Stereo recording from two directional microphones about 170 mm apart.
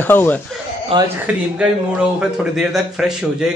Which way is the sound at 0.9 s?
30° right (ahead or behind).